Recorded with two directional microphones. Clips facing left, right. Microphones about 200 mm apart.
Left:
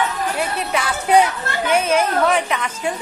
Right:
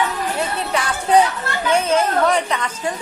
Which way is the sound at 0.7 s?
10° left (ahead or behind).